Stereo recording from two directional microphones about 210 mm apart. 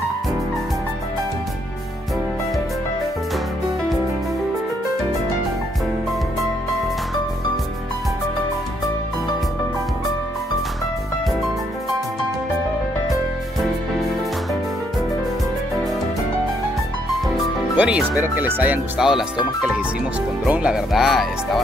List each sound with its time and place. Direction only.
17.7 s speech: 5° right (ahead or behind)
20.4 s speech: 5° right (ahead or behind)